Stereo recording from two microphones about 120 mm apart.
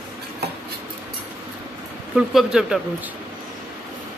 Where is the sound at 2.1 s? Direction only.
5° right (ahead or behind).